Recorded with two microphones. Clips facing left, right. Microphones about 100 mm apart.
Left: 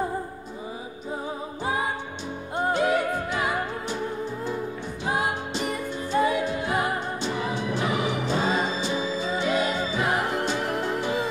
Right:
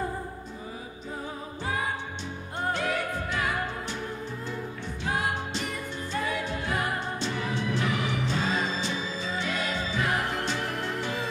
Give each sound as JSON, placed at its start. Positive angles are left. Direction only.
{"t": 1.6, "sound": "music", "side_deg": 20}
{"t": 5.0, "sound": "music", "side_deg": 15}
{"t": 10.7, "sound": "music", "side_deg": 30}
{"t": 11.0, "sound": "music", "side_deg": 15}